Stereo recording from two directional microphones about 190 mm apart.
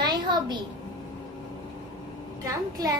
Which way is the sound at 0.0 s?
25° right (ahead or behind).